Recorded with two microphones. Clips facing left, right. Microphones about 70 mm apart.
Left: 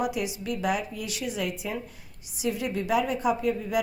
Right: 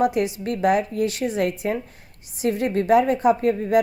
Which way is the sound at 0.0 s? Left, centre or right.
Right.